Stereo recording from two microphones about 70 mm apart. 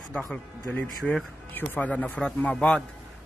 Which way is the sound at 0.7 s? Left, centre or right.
Left.